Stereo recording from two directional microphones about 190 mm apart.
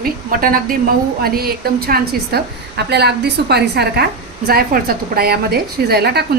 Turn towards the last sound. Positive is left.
turn(degrees=-55)  # may be behind; listen again after turning